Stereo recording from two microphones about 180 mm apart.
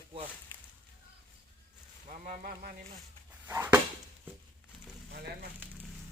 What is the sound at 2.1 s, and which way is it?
Speech, 45° right (ahead or behind).